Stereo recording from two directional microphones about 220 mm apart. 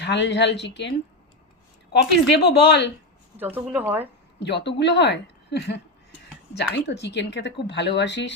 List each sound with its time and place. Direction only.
0.0 s speech: 50° left (ahead or behind)
2.3 s speech: 50° left (ahead or behind)
3.3 s speech: 10° right (ahead or behind)
4.4 s speech: 50° left (ahead or behind)